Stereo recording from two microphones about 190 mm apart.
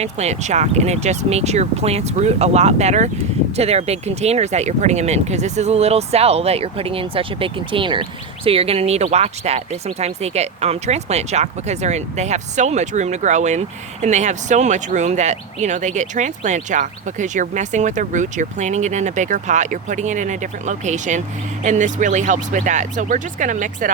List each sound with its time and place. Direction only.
0.0 s speech: 35° right (ahead or behind)